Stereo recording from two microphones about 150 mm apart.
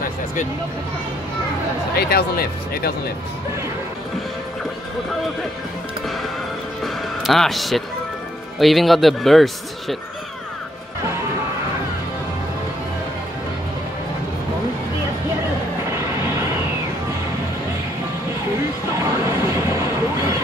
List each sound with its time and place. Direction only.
2.0 s speech: 90° left
6.8 s music: centre (ahead or behind)
8.5 s speech: centre (ahead or behind)
19.0 s a sound: 20° right (ahead or behind)